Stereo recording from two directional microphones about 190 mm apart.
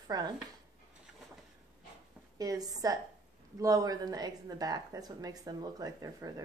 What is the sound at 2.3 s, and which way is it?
Speech, 20° right (ahead or behind).